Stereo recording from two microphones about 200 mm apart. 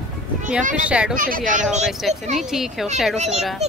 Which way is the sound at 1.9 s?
Centre (ahead or behind).